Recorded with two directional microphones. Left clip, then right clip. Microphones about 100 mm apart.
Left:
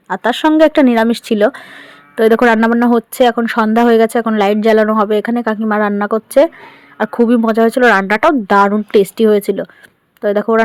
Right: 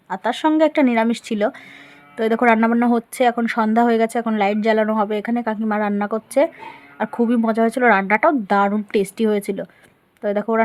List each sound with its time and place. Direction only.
0.1 s speech: 45° left (ahead or behind)
2.6 s speech: 30° left (ahead or behind)